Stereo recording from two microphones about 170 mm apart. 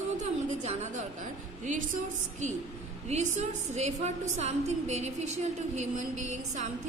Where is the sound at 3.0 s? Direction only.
40° right (ahead or behind).